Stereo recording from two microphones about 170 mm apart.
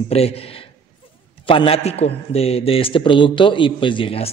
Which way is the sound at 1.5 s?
35° left (ahead or behind).